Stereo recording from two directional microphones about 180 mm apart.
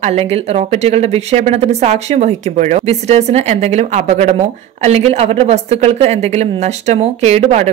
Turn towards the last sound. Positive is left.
turn(degrees=-35)  # may be behind; listen again after turning